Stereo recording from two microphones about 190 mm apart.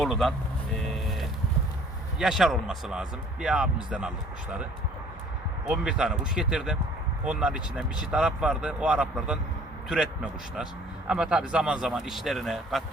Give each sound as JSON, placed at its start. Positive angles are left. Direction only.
{"t": 0.0, "sound": "speech", "side_deg": 0}
{"t": 0.9, "sound": "vehicle", "side_deg": 0}
{"t": 2.1, "sound": "speech", "side_deg": 0}
{"t": 5.6, "sound": "speech", "side_deg": -5}
{"t": 11.1, "sound": "speech", "side_deg": -5}